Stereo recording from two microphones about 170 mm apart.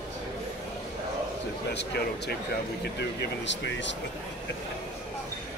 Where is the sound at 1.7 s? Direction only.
80° left.